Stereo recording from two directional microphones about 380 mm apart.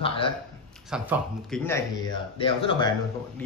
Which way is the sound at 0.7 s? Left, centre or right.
Centre.